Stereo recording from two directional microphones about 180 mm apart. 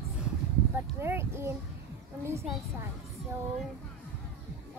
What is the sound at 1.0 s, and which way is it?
Speech, 15° right (ahead or behind).